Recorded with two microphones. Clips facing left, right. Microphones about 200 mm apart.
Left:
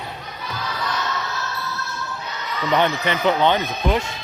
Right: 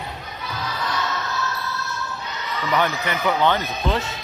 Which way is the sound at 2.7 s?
20° left (ahead or behind).